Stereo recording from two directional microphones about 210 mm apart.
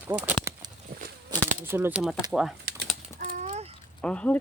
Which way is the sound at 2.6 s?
40° right (ahead or behind).